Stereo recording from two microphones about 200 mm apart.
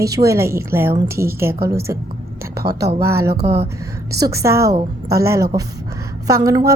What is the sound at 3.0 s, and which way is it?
Speech, 15° right (ahead or behind).